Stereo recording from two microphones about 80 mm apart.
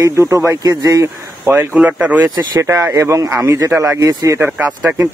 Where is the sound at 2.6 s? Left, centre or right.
Right.